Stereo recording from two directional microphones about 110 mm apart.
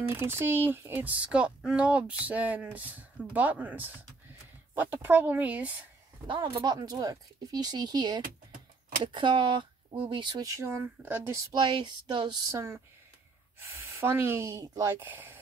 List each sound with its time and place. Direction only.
0.1 s speech: 25° right (ahead or behind)
6.2 s speech: 50° right (ahead or behind)
10.4 s speech: 30° right (ahead or behind)
11.6 s speech: 45° right (ahead or behind)
12.4 s speech: 25° right (ahead or behind)